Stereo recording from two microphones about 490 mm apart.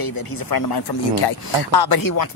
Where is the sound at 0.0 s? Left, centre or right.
Left.